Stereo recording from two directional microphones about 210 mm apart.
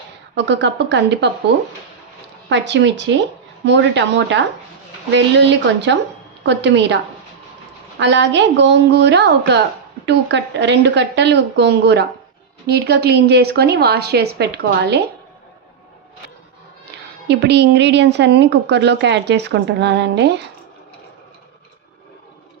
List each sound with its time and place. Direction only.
0.3 s a woman's voice: 55° right (ahead or behind)
2.5 s a woman's voice: 55° right (ahead or behind)
17.2 s a woman's voice: 55° right (ahead or behind)